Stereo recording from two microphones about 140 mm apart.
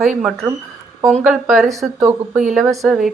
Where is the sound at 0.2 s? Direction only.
5° right (ahead or behind).